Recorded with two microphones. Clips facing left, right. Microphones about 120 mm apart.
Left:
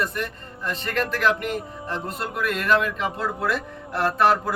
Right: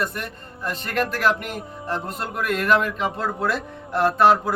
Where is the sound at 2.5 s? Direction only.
45° right (ahead or behind).